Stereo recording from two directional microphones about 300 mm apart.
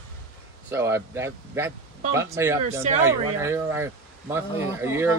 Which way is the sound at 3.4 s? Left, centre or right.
Centre.